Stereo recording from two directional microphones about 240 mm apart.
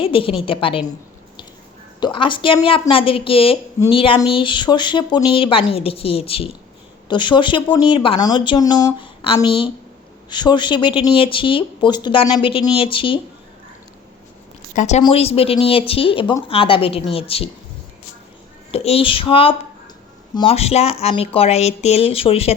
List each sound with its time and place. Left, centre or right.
0.0 s speech: left
2.0 s speech: centre
14.8 s speech: left
18.7 s speech: left